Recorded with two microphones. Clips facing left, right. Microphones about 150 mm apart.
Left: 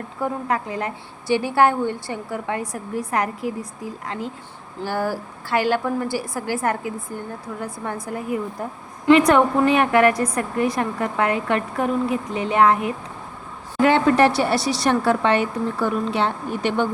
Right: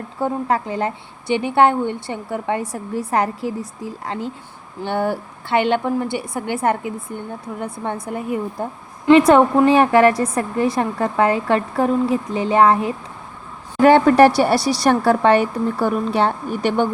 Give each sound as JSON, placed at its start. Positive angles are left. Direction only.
{"t": 0.2, "sound": "a woman's voice", "side_deg": -30}
{"t": 13.8, "sound": "a woman's voice", "side_deg": -45}
{"t": 14.3, "sound": "a woman's voice", "side_deg": -10}
{"t": 14.8, "sound": "a woman's voice", "side_deg": -45}